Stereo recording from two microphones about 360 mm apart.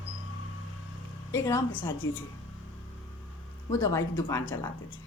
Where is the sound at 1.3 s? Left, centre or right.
Centre.